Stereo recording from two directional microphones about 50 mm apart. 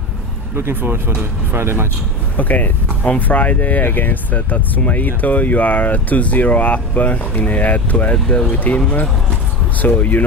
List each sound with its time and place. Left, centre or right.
0.6 s speech: right
2.3 s speech: left